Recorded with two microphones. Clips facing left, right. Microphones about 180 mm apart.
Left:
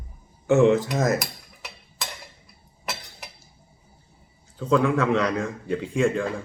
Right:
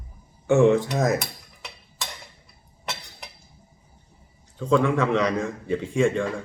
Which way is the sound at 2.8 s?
Centre (ahead or behind).